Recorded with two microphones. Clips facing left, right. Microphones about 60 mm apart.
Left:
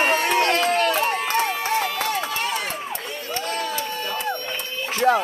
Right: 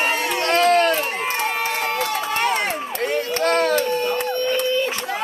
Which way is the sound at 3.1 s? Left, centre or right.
Right.